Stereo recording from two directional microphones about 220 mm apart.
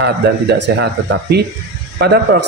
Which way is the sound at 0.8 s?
50° right (ahead or behind).